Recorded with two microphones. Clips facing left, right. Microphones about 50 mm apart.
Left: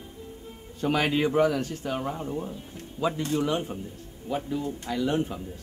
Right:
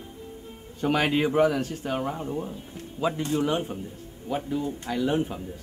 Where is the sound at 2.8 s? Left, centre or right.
Right.